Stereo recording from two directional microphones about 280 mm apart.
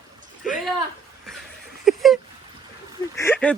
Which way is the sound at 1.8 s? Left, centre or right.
Centre.